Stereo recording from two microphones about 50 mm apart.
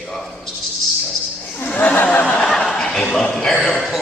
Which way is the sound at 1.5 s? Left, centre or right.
Left.